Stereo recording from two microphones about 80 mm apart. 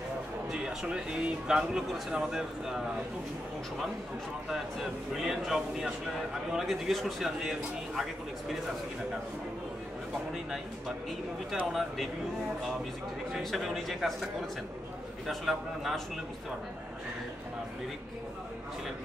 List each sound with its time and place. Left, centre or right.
0.5 s speech: centre
4.5 s a man's voice: centre
11.6 s a man's voice: centre
13.4 s a man's voice: centre